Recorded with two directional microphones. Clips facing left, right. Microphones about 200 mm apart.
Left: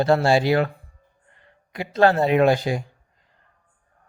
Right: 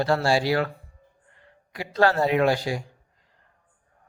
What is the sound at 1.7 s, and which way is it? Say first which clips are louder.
A man's voice: left 3 dB; 20° left (ahead or behind).